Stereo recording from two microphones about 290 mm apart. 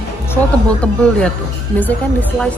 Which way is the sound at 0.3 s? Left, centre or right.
Centre.